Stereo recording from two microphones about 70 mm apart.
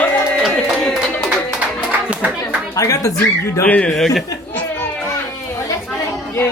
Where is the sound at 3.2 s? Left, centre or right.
Left.